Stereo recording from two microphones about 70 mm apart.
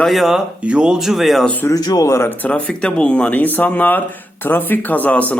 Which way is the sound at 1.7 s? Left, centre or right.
Left.